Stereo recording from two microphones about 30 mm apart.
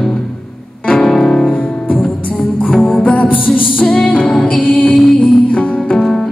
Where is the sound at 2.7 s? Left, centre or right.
Centre.